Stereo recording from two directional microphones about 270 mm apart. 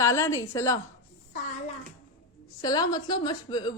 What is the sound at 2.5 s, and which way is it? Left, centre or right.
A woman's voice, centre.